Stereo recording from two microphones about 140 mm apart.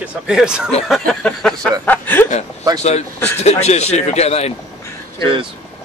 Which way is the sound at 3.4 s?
50° left (ahead or behind).